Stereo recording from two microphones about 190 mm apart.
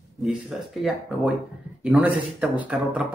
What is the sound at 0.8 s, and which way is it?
Speech, centre (ahead or behind).